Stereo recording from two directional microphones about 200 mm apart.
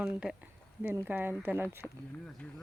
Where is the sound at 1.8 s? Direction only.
10° left (ahead or behind).